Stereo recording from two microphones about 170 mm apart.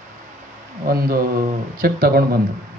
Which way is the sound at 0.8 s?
60° right (ahead or behind).